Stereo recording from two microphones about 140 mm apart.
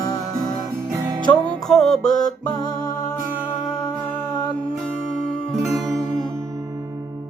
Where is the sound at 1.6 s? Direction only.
Centre (ahead or behind).